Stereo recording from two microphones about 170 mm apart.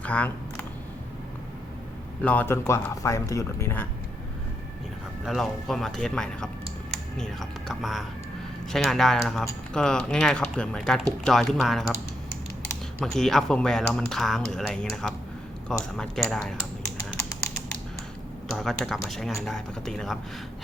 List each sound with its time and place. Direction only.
0.0 s camera: 10° left (ahead or behind)
2.2 s speech: 10° left (ahead or behind)
5.2 s speech: centre (ahead or behind)
13.0 s speech: 5° left (ahead or behind)
18.5 s speech: centre (ahead or behind)